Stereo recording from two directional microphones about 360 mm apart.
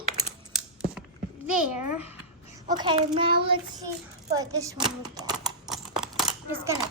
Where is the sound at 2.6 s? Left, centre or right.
Centre.